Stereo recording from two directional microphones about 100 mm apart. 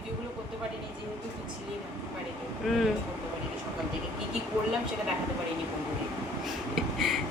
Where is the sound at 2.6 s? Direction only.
Centre (ahead or behind).